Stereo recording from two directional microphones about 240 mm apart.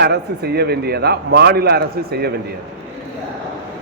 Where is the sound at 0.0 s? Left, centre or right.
Right.